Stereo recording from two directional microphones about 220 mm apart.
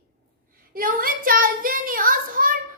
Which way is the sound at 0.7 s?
40° right (ahead or behind).